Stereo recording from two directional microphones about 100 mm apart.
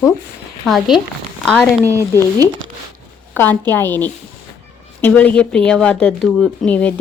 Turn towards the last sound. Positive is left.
turn(degrees=15)  # may be behind; listen again after turning